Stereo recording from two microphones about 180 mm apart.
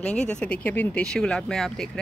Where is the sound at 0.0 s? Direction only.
5° left (ahead or behind).